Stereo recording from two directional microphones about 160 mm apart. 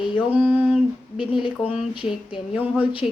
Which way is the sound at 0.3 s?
10° right (ahead or behind).